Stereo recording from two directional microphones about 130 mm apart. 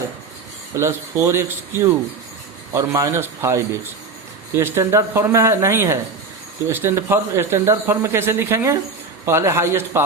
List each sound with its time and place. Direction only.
0.8 s speech: 20° right (ahead or behind)